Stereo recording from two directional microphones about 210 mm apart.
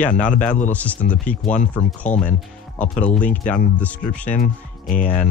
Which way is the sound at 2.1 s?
35° left (ahead or behind).